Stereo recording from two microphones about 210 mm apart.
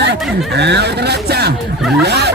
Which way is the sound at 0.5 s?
55° right (ahead or behind).